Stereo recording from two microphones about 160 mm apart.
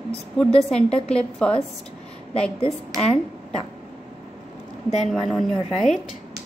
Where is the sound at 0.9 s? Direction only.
40° left (ahead or behind).